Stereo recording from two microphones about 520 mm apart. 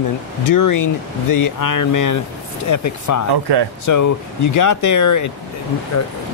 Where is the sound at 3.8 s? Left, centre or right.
Left.